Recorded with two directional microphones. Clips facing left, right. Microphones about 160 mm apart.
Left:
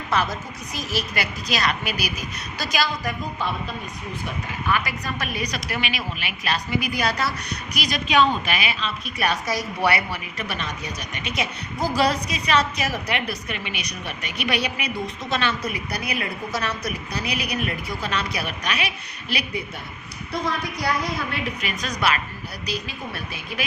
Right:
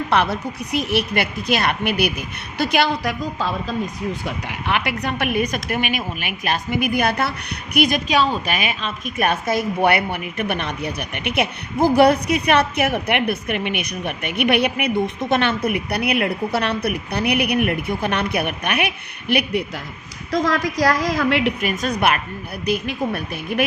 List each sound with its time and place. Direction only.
0.1 s a woman's voice: 65° right (ahead or behind); by 3.5 s 90° right
4.3 s a woman's voice: 75° right (ahead or behind); by 8.1 s 50° right (ahead or behind)
8.1 s a woman's voice: 40° right (ahead or behind); by 19.6 s 55° right (ahead or behind)
20.3 s a woman's voice: 90° right
21.6 s a woman's voice: 50° right (ahead or behind)